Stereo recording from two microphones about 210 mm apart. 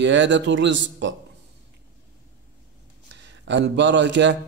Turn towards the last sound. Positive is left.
turn(degrees=-55)  # may be behind; listen again after turning